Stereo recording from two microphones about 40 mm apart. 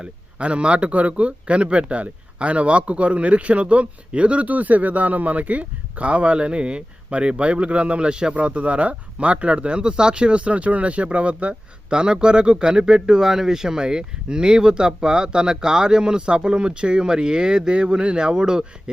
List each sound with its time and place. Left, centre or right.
0.0 s speech: right